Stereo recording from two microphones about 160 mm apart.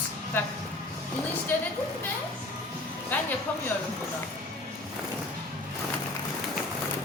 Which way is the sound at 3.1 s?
10° left (ahead or behind).